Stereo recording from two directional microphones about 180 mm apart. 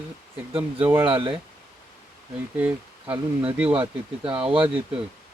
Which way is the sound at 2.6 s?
10° right (ahead or behind).